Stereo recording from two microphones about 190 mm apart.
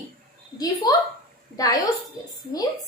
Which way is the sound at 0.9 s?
20° left (ahead or behind).